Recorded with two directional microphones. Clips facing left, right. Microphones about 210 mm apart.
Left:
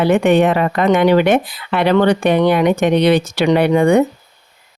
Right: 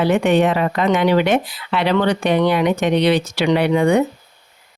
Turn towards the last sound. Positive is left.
turn(degrees=50)  # may be behind; listen again after turning